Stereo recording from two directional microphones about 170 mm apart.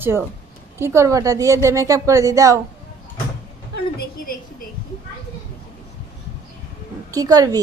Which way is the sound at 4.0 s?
60° left (ahead or behind).